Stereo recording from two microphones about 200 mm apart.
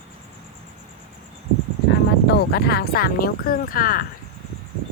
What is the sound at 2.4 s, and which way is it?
Speech, 55° left (ahead or behind).